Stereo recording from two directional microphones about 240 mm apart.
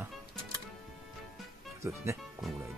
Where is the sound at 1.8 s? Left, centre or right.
Centre.